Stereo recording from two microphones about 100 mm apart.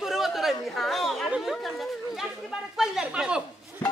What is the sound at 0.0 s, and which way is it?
Chatter, 5° right (ahead or behind).